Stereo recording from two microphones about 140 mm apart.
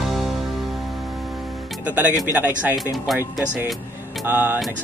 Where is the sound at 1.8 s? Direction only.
10° right (ahead or behind).